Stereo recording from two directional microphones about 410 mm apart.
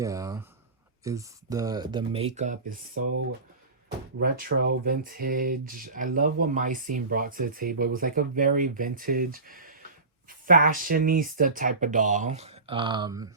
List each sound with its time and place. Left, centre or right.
0.0 s speech: centre
4.2 s speech: right